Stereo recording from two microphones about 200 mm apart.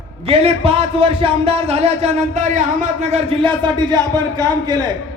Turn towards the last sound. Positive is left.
turn(degrees=-20)  # may be behind; listen again after turning